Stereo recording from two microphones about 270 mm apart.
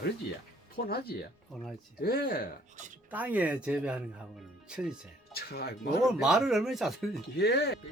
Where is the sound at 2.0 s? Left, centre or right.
Left.